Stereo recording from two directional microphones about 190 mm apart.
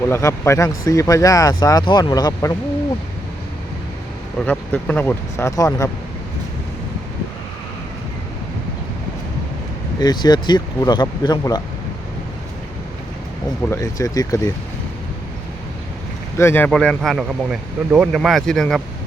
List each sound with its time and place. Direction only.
0.1 s speech: 15° left (ahead or behind)
4.4 s speech: 10° left (ahead or behind)
10.0 s speech: 20° left (ahead or behind)
13.7 s speech: 20° left (ahead or behind)
16.4 s speech: 10° left (ahead or behind)